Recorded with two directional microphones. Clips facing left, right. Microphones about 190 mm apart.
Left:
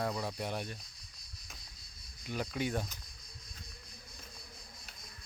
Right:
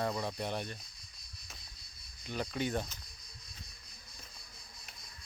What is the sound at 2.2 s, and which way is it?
Speech, 5° left (ahead or behind).